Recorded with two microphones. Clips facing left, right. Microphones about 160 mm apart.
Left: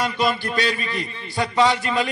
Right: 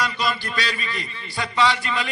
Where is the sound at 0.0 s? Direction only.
50° left (ahead or behind).